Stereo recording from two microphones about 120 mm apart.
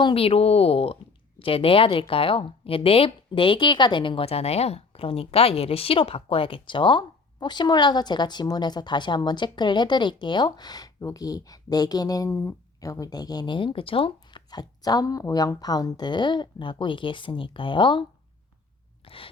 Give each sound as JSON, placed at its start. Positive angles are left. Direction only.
{"t": 0.0, "sound": "a woman's voice", "side_deg": 50}
{"t": 19.0, "sound": "chewing", "side_deg": 50}